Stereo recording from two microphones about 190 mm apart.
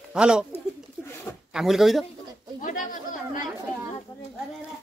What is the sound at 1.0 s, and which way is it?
Bird, 10° left (ahead or behind).